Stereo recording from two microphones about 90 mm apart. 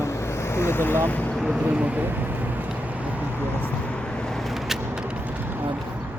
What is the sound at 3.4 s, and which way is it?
Vehicle, 15° left (ahead or behind).